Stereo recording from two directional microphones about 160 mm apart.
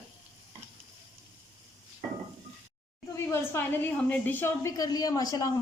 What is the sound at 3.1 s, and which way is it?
A woman's voice, 15° left (ahead or behind).